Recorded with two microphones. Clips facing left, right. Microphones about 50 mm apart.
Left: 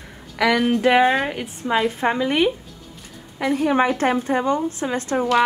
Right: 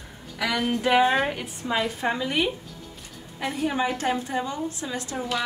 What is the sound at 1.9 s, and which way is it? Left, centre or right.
A woman's voice, left.